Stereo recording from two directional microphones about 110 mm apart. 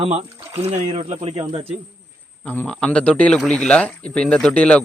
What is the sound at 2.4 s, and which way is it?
A man's voice, 15° left (ahead or behind).